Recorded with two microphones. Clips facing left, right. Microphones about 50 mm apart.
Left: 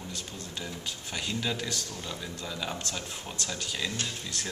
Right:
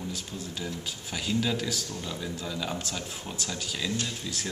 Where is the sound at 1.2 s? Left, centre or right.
Centre.